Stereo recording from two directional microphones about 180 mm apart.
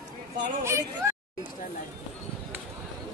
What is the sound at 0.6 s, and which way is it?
Speech, 15° right (ahead or behind).